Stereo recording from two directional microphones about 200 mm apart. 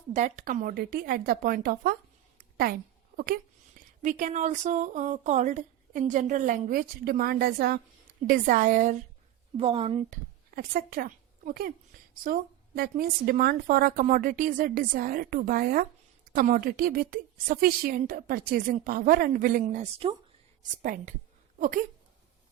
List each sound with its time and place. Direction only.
0.1 s a woman's voice: 35° right (ahead or behind)
3.8 s speech: 40° right (ahead or behind)
9.6 s speech: 30° right (ahead or behind)
10.5 s a woman's voice: 50° right (ahead or behind)